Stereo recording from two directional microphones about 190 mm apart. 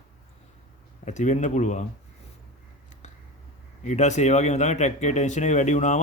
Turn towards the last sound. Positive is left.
turn(degrees=40)  # may be behind; listen again after turning